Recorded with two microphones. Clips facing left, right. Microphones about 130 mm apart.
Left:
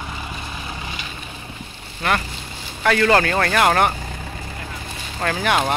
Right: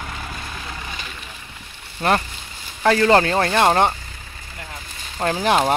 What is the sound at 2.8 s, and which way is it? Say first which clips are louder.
Speech: right 2 dB; 25° right (ahead or behind).